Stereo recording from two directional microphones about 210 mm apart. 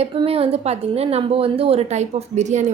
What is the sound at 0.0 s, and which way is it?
A woman's voice, 30° right (ahead or behind).